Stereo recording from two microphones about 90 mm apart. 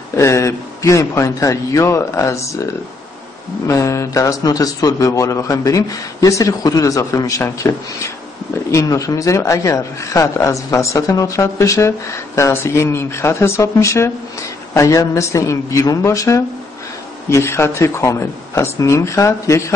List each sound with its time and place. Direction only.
0.1 s a man's voice: 30° left (ahead or behind)